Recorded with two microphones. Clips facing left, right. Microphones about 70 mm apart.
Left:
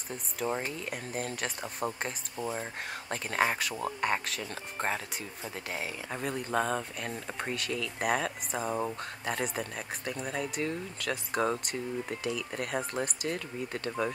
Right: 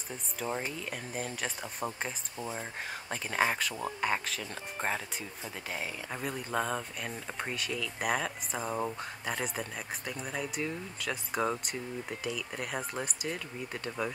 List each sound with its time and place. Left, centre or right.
0.5 s speech: centre
2.3 s speech: left
2.6 s speech: centre